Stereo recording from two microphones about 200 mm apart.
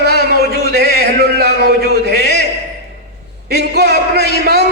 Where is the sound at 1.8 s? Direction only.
55° left (ahead or behind).